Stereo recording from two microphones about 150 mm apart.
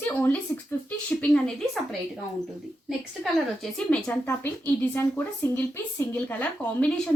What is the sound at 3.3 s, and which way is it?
A woman's voice, 5° left (ahead or behind).